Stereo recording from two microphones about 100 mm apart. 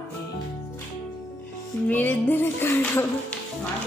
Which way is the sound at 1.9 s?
20° left (ahead or behind).